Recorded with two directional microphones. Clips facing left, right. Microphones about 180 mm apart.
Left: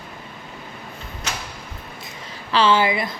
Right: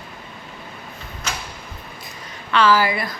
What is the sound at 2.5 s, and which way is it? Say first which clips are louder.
Speech: even; 25° left (ahead or behind).